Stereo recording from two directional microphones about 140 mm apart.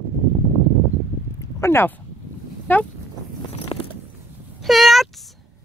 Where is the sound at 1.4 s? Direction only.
20° left (ahead or behind).